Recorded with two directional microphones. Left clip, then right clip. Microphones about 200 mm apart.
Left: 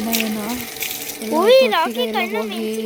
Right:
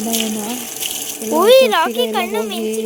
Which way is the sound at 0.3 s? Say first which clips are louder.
Right 1 dB; 35° right (ahead or behind).